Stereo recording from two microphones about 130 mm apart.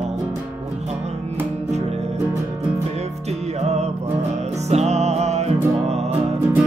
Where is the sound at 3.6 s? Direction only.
55° right (ahead or behind).